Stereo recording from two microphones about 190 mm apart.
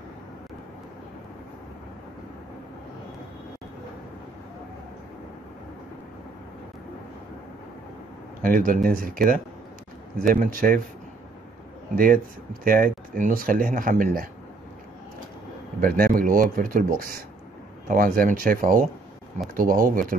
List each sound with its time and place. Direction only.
8.4 s speech: 45° right (ahead or behind)
11.9 s speech: 50° right (ahead or behind)
15.8 s speech: 50° right (ahead or behind)